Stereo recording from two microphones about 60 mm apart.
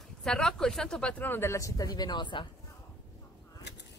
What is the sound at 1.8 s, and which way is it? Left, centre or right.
Speech, left.